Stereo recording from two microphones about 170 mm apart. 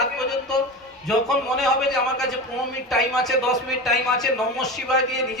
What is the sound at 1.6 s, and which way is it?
Speech, centre (ahead or behind).